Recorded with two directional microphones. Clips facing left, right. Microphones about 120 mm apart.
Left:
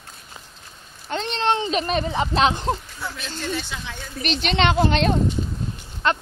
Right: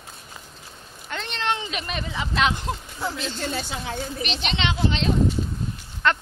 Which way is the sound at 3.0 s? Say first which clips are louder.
Right 3 dB; 30° right (ahead or behind).